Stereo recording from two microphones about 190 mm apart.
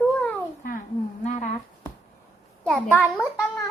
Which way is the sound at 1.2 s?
40° left (ahead or behind).